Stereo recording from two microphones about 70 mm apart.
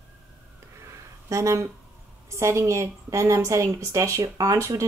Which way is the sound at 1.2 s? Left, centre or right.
Right.